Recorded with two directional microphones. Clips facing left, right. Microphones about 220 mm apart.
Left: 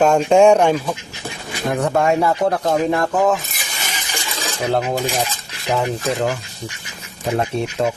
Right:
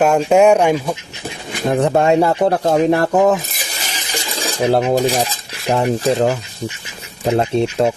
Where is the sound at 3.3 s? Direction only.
40° right (ahead or behind).